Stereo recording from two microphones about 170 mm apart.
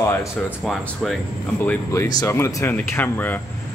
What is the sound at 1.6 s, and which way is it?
Speech, 15° left (ahead or behind).